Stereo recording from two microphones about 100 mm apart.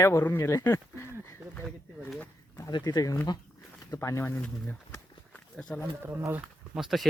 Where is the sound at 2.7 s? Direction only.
40° left (ahead or behind); by 4.7 s 15° left (ahead or behind).